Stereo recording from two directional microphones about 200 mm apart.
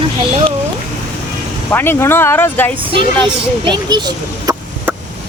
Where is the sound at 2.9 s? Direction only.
25° right (ahead or behind).